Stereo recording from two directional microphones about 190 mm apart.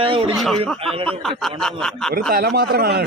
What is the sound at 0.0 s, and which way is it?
Speech, 30° right (ahead or behind).